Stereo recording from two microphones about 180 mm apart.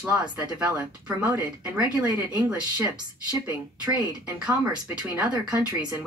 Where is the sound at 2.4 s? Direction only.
10° right (ahead or behind).